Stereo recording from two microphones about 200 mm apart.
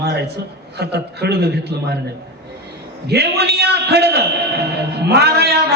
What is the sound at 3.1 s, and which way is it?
A man's voice, 55° right (ahead or behind).